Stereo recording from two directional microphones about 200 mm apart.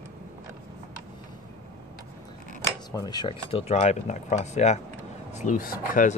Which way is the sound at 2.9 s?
20° left (ahead or behind).